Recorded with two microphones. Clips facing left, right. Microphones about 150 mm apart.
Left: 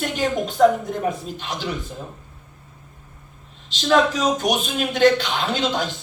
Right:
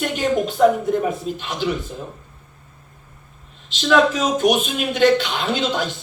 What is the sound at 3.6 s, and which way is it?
Speech, 45° left (ahead or behind).